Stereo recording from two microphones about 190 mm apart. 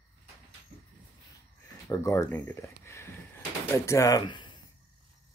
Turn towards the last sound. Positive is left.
turn(degrees=20)  # may be behind; listen again after turning